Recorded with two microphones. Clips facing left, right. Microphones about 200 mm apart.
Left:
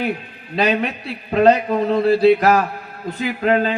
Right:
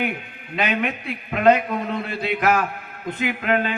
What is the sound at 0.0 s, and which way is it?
Speech, 35° left (ahead or behind).